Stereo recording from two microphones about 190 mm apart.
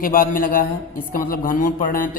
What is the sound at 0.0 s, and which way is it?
A woman's voice, 45° left (ahead or behind).